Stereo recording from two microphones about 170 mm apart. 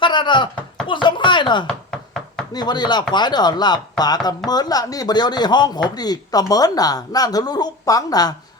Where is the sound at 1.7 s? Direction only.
5° left (ahead or behind).